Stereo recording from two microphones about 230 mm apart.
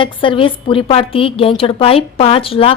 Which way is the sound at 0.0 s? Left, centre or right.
Left.